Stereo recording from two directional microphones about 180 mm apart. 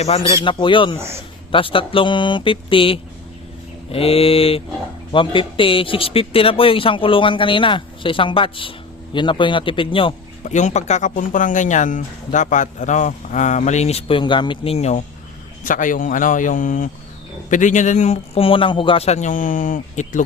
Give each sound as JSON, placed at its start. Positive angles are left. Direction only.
{"t": 0.0, "sound": "a man's voice", "side_deg": 35}
{"t": 0.9, "sound": "a man's voice", "side_deg": -15}
{"t": 1.5, "sound": "a man's voice", "side_deg": 30}
{"t": 10.4, "sound": "speech", "side_deg": 40}